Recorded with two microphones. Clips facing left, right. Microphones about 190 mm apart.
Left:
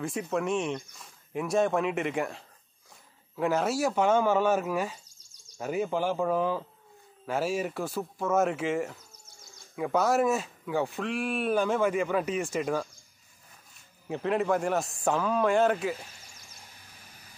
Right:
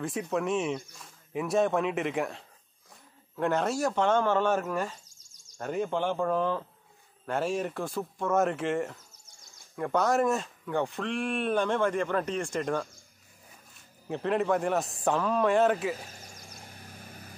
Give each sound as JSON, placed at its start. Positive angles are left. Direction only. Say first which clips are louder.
{"t": 0.0, "sound": "speech", "louder": "even", "side_deg": 0}
{"t": 14.0, "sound": "speech", "louder": "even", "side_deg": 0}
{"t": 16.1, "sound": "a sound", "louder": "right 6 dB", "side_deg": -45}